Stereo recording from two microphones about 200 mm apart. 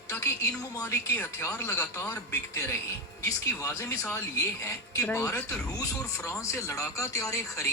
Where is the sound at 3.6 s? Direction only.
15° left (ahead or behind).